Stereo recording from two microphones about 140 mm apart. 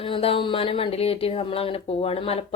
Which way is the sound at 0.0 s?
40° left (ahead or behind).